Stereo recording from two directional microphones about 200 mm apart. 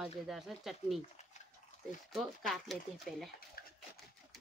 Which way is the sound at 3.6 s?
50° left (ahead or behind).